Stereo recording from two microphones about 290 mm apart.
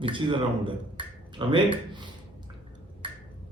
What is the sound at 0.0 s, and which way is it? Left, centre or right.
Speech, centre.